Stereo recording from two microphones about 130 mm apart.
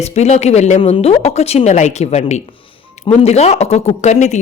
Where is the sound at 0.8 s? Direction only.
45° left (ahead or behind).